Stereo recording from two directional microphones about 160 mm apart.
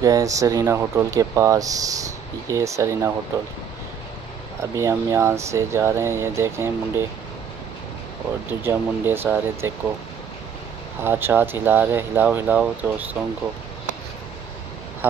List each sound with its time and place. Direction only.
0.0 s speech: 20° right (ahead or behind)
4.6 s speech: 20° right (ahead or behind)
8.6 s speech: 15° right (ahead or behind)
11.0 s speech: 15° right (ahead or behind)